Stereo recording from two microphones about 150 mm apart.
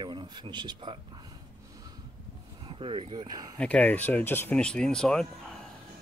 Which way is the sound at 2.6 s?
35° right (ahead or behind).